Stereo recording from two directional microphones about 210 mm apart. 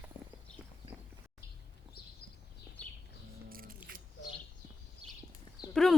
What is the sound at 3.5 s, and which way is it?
Scissors, 45° right (ahead or behind).